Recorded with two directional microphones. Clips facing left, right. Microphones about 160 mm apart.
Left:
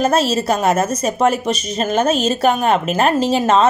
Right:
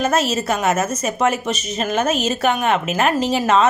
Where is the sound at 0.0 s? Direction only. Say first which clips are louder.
Left 3 dB; 30° left (ahead or behind).